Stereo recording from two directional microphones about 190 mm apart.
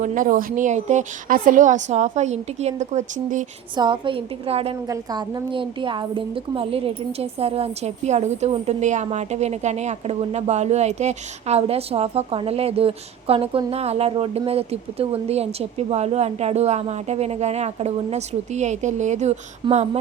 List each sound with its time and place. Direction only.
0.0 s a woman's voice: 45° right (ahead or behind)
3.8 s a woman's voice: 25° right (ahead or behind)